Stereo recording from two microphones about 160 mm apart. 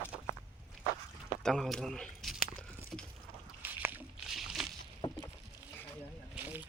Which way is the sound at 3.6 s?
10° right (ahead or behind).